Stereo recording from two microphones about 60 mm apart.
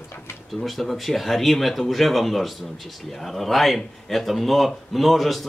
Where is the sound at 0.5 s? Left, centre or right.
Centre.